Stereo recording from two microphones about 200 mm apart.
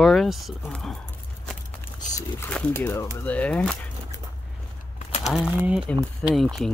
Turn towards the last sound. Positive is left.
turn(degrees=0)  # may be behind; listen again after turning